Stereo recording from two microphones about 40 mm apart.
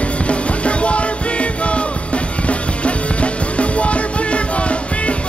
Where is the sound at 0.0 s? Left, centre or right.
Left.